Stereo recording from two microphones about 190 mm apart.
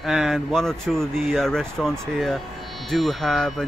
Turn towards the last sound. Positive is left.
turn(degrees=0)  # may be behind; listen again after turning